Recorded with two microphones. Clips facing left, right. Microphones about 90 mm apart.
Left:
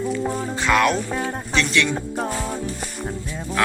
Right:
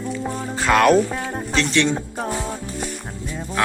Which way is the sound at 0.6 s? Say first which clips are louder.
Right 4 dB; 45° right (ahead or behind).